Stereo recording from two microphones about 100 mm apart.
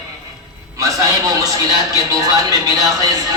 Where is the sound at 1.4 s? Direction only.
35° right (ahead or behind).